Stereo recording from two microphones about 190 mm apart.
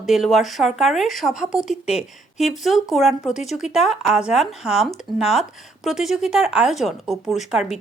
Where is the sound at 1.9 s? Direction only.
35° left (ahead or behind).